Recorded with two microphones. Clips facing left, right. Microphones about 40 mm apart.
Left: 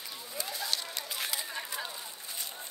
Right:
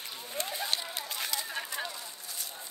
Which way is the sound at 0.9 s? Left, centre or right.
Centre.